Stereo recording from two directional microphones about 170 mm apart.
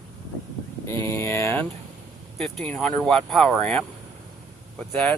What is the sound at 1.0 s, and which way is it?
Speech, 15° left (ahead or behind).